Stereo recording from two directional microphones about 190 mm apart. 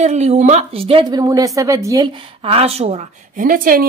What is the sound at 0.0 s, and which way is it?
A woman's voice, 35° right (ahead or behind).